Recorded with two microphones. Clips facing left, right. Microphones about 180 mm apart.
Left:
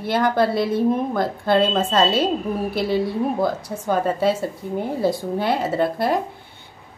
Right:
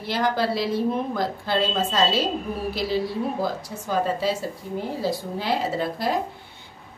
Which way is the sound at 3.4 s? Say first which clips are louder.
Left 5 dB; 60° left (ahead or behind).